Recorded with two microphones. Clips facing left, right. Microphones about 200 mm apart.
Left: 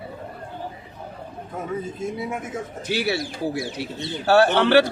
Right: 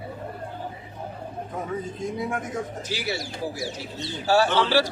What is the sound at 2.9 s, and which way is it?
Speech, 60° left (ahead or behind).